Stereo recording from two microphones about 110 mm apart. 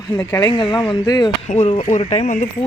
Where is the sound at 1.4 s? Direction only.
85° left; by 2.5 s 65° left (ahead or behind).